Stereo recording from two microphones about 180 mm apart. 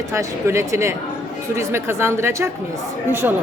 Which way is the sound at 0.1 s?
15° right (ahead or behind).